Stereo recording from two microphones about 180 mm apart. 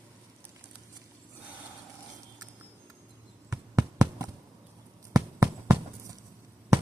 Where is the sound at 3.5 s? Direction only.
15° right (ahead or behind).